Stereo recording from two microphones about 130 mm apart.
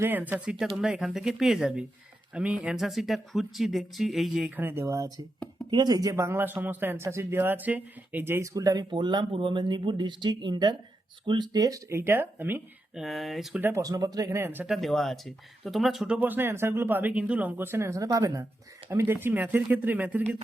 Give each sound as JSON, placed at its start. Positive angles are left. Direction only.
{"t": 0.0, "sound": "speech", "side_deg": -15}
{"t": 4.5, "sound": "speech", "side_deg": -15}
{"t": 12.9, "sound": "speech", "side_deg": 0}
{"t": 13.6, "sound": "speech", "side_deg": -15}
{"t": 13.8, "sound": "speech", "side_deg": -30}
{"t": 14.7, "sound": "speech", "side_deg": 0}